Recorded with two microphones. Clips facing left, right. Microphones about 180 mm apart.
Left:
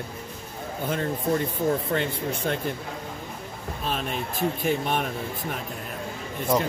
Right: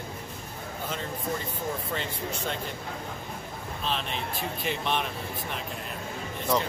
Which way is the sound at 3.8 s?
45° left (ahead or behind).